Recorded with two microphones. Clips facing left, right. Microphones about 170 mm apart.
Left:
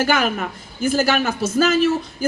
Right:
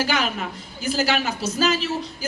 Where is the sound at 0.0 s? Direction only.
50° left (ahead or behind).